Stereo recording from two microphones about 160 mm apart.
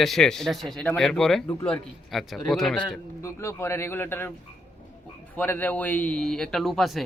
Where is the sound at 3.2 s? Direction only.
15° left (ahead or behind).